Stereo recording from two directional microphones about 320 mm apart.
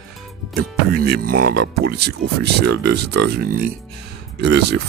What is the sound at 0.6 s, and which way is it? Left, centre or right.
Speech, right.